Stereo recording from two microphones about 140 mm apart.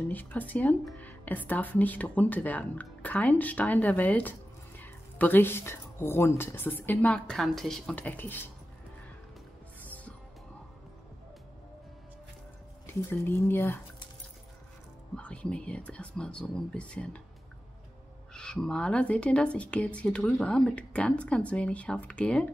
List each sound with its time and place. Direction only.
0.1 s speech: 10° left (ahead or behind)
9.8 s music: 10° left (ahead or behind)
12.8 s speech: 15° left (ahead or behind)
15.1 s speech: 10° left (ahead or behind)
18.3 s speech: 5° left (ahead or behind)